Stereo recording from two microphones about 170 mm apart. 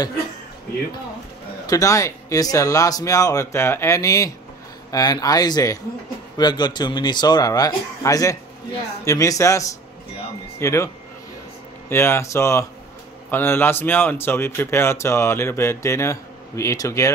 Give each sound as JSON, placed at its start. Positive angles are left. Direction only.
{"t": 1.7, "sound": "a man's voice", "side_deg": 20}
{"t": 11.9, "sound": "a man's voice", "side_deg": 15}